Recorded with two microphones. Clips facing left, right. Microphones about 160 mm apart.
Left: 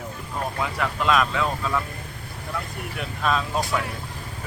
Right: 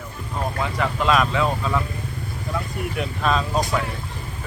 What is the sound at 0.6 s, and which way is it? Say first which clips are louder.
Speech: right 2 dB; centre (ahead or behind).